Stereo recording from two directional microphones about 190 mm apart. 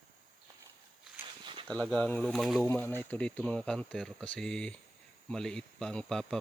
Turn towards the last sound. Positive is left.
turn(degrees=5)  # may be behind; listen again after turning